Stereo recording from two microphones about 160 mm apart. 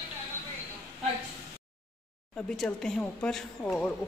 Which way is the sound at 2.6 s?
5° left (ahead or behind).